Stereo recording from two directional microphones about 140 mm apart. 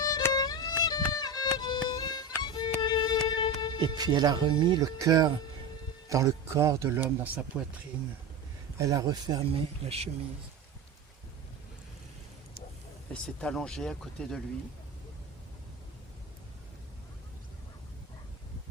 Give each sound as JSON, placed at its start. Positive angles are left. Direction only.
{"t": 0.0, "sound": "violin", "side_deg": 25}
{"t": 2.8, "sound": "music", "side_deg": 30}
{"t": 3.8, "sound": "speech", "side_deg": -30}
{"t": 8.8, "sound": "speech", "side_deg": -25}
{"t": 9.8, "sound": "speech", "side_deg": -50}
{"t": 13.2, "sound": "speech", "side_deg": 5}